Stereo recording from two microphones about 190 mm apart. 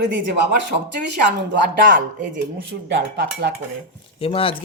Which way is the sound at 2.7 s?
70° right (ahead or behind).